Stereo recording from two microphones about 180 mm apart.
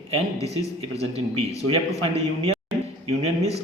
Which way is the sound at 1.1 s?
35° right (ahead or behind).